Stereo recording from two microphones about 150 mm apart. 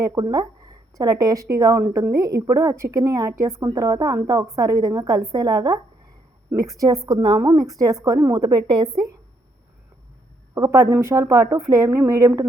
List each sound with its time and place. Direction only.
0.0 s a woman's voice: 20° right (ahead or behind)
10.5 s a woman's voice: 20° right (ahead or behind)